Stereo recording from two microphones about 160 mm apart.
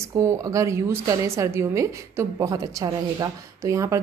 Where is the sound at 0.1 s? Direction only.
20° right (ahead or behind).